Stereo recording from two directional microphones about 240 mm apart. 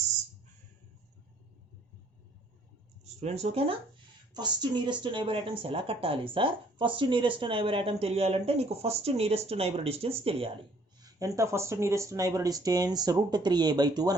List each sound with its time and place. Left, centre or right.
3.0 s speech: right
11.0 s speech: centre